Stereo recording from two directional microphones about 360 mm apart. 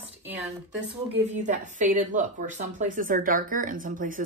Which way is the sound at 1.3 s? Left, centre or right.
Centre.